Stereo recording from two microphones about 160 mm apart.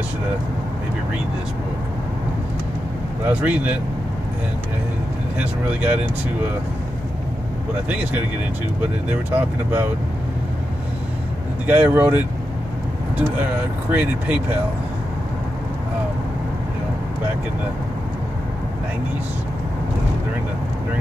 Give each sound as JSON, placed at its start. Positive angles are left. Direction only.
{"t": 3.3, "sound": "speech", "side_deg": -10}
{"t": 5.4, "sound": "speech", "side_deg": -10}
{"t": 9.1, "sound": "speech", "side_deg": -10}
{"t": 11.6, "sound": "speech", "side_deg": -10}
{"t": 13.9, "sound": "speech", "side_deg": -10}